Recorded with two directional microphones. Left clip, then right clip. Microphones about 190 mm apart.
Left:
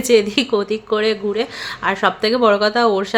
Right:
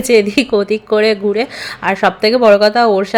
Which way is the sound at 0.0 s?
15° right (ahead or behind).